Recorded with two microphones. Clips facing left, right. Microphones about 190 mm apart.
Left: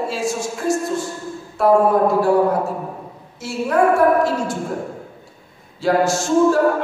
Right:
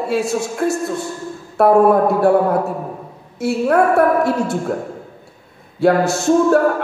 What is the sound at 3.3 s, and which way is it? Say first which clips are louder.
Speech: right 4 dB; 60° right (ahead or behind).